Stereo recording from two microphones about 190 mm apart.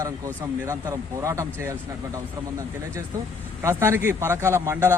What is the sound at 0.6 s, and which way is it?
A man's voice, 15° right (ahead or behind).